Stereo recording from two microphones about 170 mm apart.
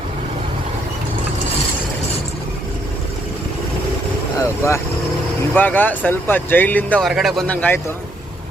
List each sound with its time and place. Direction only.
4.4 s speech: 15° left (ahead or behind)